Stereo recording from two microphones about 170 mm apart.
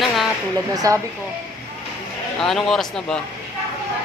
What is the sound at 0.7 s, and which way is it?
Speech, 20° right (ahead or behind).